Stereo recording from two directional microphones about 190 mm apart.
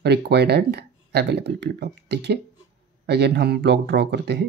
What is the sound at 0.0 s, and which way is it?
Speech, 60° right (ahead or behind).